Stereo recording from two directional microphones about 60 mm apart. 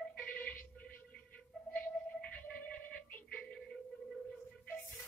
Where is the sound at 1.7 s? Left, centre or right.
Centre.